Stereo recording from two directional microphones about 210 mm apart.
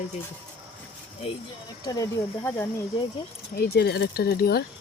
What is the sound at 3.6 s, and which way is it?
Speech, 50° left (ahead or behind).